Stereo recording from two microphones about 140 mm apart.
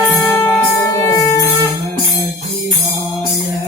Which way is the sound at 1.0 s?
25° left (ahead or behind).